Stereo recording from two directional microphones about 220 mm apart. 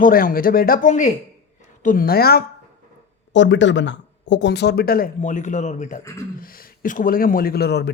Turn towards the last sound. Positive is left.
turn(degrees=50)  # may be behind; listen again after turning